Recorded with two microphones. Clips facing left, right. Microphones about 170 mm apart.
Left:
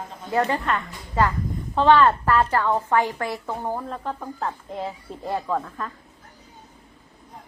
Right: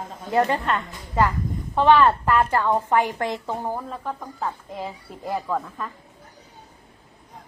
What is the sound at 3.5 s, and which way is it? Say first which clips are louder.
A woman's voice: even; centre (ahead or behind).